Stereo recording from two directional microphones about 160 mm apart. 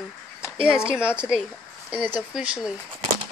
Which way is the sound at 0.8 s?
5° right (ahead or behind).